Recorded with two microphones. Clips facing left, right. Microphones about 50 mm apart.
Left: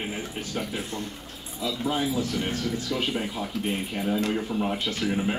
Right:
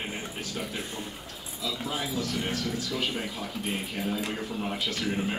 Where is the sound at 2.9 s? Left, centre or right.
Centre.